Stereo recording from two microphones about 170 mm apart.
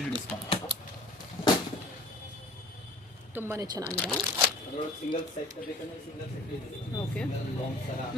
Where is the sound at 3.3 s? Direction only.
15° right (ahead or behind).